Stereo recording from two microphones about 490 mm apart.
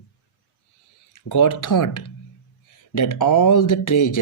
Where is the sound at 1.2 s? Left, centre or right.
Left.